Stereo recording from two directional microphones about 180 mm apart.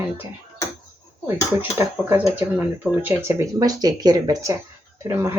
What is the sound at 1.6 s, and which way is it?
Speech, 15° right (ahead or behind).